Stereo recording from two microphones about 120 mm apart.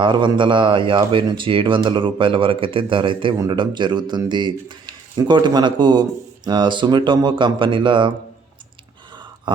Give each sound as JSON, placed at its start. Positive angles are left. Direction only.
{"t": 0.0, "sound": "speech", "side_deg": -40}